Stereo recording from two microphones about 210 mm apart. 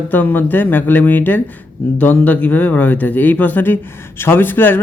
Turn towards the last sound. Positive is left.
turn(degrees=10)  # may be behind; listen again after turning